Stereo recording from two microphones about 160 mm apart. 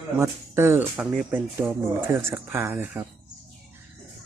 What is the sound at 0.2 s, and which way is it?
Speech, 15° right (ahead or behind).